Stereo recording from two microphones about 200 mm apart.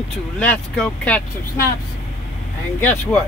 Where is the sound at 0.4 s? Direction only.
5° left (ahead or behind).